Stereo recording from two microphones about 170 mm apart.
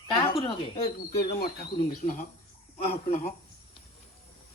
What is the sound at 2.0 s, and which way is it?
Speech, 45° left (ahead or behind).